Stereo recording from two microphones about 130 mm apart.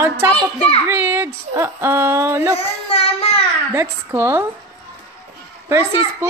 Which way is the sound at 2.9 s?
50° left (ahead or behind).